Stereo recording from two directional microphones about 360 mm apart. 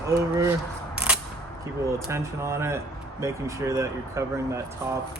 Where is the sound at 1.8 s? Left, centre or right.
Centre.